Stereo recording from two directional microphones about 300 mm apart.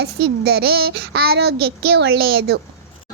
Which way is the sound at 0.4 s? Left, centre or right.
Right.